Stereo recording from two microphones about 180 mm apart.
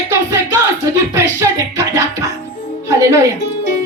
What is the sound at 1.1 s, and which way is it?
Music, 20° right (ahead or behind).